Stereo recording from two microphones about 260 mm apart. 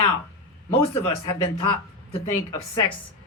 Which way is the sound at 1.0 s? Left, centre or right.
Centre.